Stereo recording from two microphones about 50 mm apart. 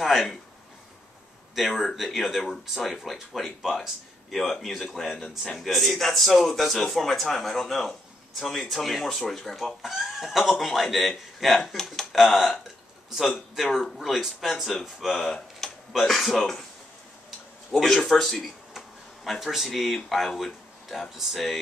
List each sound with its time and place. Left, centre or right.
0.0 s a man's voice: centre
1.5 s a man's voice: centre
9.8 s a man's voice: centre
13.6 s a man's voice: centre
17.7 s a man's voice: centre
18.4 s a sound: centre
19.4 s a man's voice: centre